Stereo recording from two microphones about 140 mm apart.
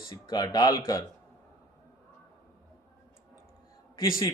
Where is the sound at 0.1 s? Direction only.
30° left (ahead or behind).